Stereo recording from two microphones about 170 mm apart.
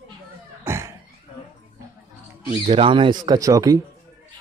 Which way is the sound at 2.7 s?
30° right (ahead or behind).